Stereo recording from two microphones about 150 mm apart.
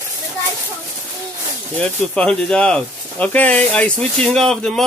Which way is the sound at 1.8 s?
5° left (ahead or behind).